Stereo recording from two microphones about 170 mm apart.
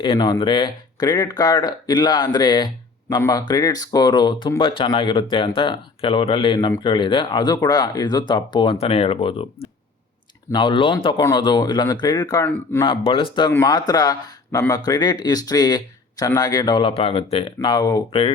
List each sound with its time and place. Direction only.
0.0 s speech: 25° left (ahead or behind)
12.5 s a man's voice: 10° left (ahead or behind)
13.1 s speech: 30° left (ahead or behind)